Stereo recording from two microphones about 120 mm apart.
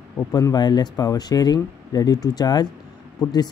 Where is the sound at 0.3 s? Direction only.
30° left (ahead or behind).